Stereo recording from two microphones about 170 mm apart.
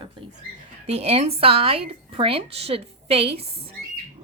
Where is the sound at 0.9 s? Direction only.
35° right (ahead or behind).